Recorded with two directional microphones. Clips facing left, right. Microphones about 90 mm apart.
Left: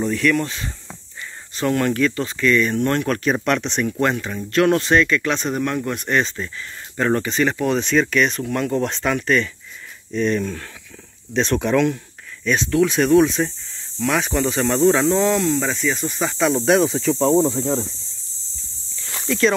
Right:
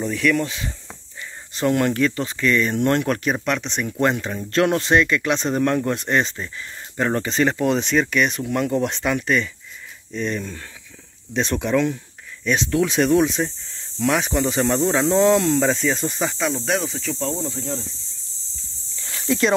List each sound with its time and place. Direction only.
0.1 s speech: 10° right (ahead or behind)
1.5 s speech: 20° right (ahead or behind)
3.4 s speech: centre (ahead or behind)
4.0 s speech: 25° right (ahead or behind)
7.2 s speech: 30° right (ahead or behind); by 12.0 s 5° right (ahead or behind)
12.6 s speech: 25° right (ahead or behind)
14.1 s speech: 15° right (ahead or behind)
15.2 s speech: 25° right (ahead or behind)
16.3 s speech: 5° left (ahead or behind); by 17.8 s 45° left (ahead or behind)
19.2 s speech: 25° right (ahead or behind)